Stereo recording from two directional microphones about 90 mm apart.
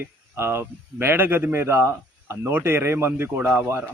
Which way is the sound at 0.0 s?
25° right (ahead or behind).